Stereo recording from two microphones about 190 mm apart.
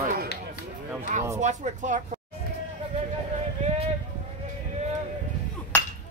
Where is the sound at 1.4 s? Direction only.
40° right (ahead or behind).